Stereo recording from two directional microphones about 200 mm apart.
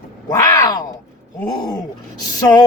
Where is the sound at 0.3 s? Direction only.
15° left (ahead or behind).